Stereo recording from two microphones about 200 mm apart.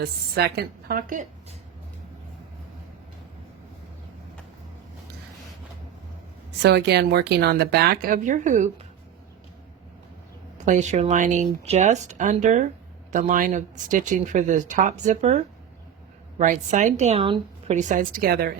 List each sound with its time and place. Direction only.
0.0 s speech: 50° right (ahead or behind)
6.6 s speech: 55° right (ahead or behind); by 8.9 s 35° right (ahead or behind)
10.6 s speech: 35° right (ahead or behind)
16.4 s speech: 40° right (ahead or behind)